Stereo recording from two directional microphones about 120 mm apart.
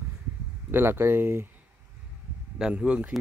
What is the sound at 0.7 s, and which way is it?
Speech, 20° right (ahead or behind).